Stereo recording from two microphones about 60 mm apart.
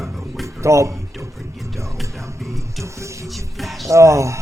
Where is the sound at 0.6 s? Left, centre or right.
Right.